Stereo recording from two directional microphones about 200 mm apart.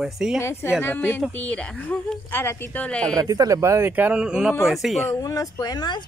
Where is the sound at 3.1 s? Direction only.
15° right (ahead or behind); by 5.1 s centre (ahead or behind).